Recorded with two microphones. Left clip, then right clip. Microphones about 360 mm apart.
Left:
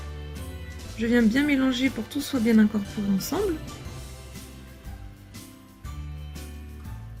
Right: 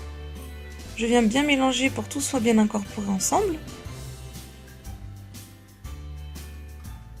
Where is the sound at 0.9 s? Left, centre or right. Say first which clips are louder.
Right 2 dB; right.